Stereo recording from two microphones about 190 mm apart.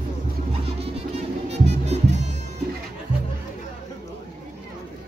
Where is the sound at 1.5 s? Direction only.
35° right (ahead or behind).